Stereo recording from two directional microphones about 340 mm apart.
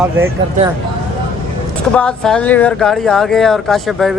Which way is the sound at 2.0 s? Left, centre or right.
Centre.